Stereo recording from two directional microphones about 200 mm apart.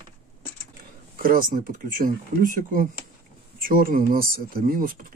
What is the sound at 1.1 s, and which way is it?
Speech, 45° right (ahead or behind).